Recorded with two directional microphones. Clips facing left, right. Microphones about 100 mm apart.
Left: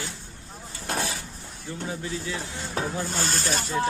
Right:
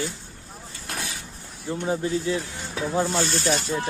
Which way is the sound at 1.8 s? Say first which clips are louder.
Right 7 dB; 35° right (ahead or behind).